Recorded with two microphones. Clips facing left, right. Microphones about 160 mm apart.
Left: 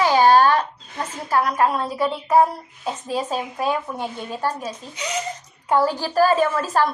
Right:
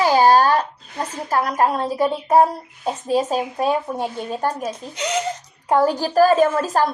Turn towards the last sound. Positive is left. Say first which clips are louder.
# right 3 dB
turn(degrees=-45)  # may be behind; listen again after turning